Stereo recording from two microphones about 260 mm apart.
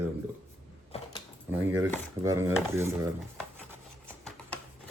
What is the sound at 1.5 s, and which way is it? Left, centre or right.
Speech, centre.